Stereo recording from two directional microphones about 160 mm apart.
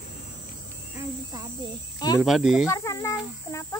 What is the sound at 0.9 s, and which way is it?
Cricket, 20° right (ahead or behind).